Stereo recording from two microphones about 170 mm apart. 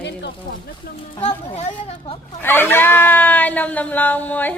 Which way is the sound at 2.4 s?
10° left (ahead or behind).